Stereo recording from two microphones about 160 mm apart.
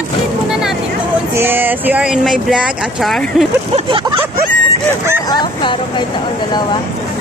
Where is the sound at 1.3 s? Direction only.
15° right (ahead or behind).